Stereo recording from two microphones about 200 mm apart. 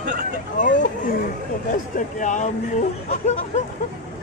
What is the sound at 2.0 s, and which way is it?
Speech, 40° left (ahead or behind).